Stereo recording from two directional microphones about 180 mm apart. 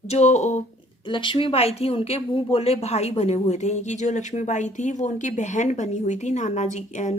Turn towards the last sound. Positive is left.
turn(degrees=40)  # may be behind; listen again after turning